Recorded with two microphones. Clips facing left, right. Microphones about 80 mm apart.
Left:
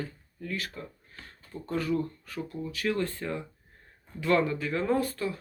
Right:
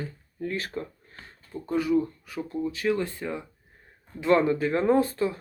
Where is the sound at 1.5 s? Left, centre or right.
Centre.